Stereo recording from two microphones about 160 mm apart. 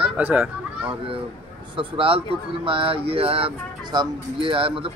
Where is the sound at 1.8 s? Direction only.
35° right (ahead or behind).